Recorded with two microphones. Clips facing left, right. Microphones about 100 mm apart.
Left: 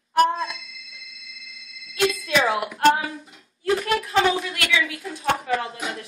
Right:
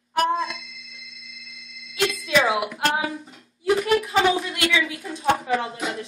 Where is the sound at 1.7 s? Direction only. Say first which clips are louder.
Left 2 dB; centre (ahead or behind); by 5.1 s 15° right (ahead or behind).